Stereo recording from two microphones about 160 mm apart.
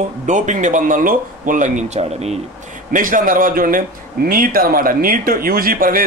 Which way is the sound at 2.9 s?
55° right (ahead or behind).